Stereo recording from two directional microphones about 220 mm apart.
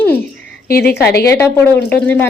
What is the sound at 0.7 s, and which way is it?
Speech, 45° left (ahead or behind).